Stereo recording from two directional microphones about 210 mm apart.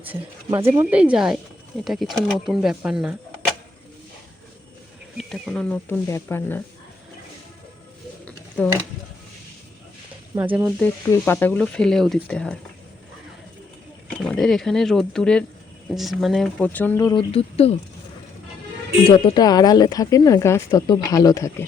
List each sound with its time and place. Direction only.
0.0 s speech: 10° right (ahead or behind)
5.1 s speech: centre (ahead or behind)
8.2 s a sound: 5° left (ahead or behind)
10.5 s speech: 10° right (ahead or behind)
10.8 s speech: 10° left (ahead or behind)
14.2 s speech: centre (ahead or behind); by 17.7 s 30° left (ahead or behind)
19.0 s speech: 25° left (ahead or behind)